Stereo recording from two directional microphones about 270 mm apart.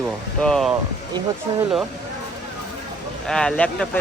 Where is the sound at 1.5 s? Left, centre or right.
Centre.